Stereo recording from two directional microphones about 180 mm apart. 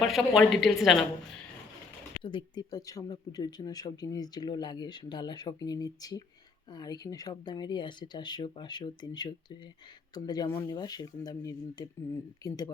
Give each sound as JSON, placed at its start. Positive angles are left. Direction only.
{"t": 0.0, "sound": "a woman's voice", "side_deg": 0}
{"t": 2.2, "sound": "speech", "side_deg": 25}